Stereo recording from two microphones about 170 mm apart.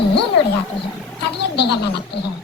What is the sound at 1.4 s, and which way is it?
Speech, 75° left (ahead or behind).